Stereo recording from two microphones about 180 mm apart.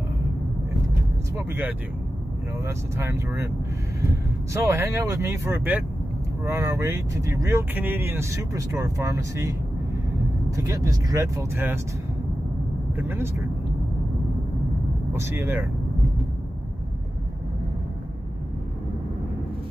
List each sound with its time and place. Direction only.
1.5 s speech: 10° right (ahead or behind)
4.6 s speech: 15° right (ahead or behind)
12.9 s speech: 10° right (ahead or behind)
15.1 s speech: 15° right (ahead or behind)